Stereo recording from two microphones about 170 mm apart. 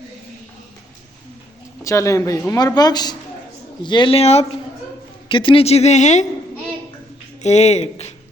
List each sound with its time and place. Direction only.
1.8 s speech: 20° left (ahead or behind); by 6.2 s 45° left (ahead or behind)
7.4 s speech: 40° left (ahead or behind)